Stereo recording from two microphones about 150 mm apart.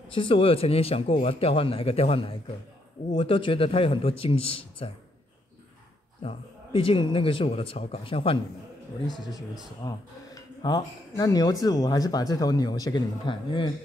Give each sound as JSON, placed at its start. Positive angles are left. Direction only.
{"t": 0.1, "sound": "a man's voice", "side_deg": 35}
{"t": 6.2, "sound": "a man's voice", "side_deg": 35}
{"t": 9.0, "sound": "a man's voice", "side_deg": 0}
{"t": 9.8, "sound": "speech", "side_deg": 25}